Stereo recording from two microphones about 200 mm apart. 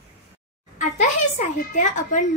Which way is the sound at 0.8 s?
35° left (ahead or behind).